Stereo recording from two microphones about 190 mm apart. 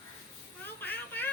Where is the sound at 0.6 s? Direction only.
10° left (ahead or behind).